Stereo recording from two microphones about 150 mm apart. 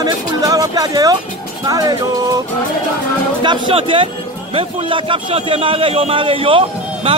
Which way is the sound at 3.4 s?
35° right (ahead or behind).